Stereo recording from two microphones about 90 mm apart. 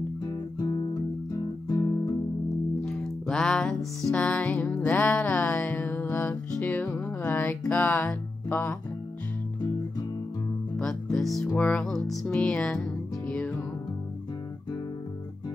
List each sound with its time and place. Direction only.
0.2 s music: 45° left (ahead or behind)
2.8 s music: 5° left (ahead or behind)
11.1 s music: centre (ahead or behind)
11.5 s music: 15° left (ahead or behind)
11.8 s music: 5° left (ahead or behind)